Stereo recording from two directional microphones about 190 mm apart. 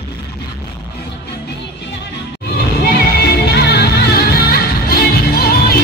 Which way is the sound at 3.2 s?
60° left (ahead or behind).